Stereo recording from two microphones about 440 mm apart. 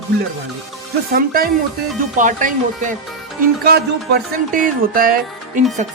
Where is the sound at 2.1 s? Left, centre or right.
Centre.